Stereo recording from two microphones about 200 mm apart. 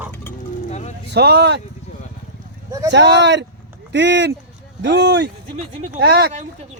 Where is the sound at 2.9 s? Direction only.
60° right (ahead or behind).